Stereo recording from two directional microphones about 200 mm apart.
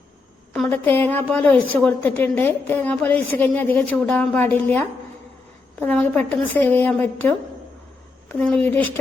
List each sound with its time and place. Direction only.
0.5 s a woman's voice: 5° left (ahead or behind)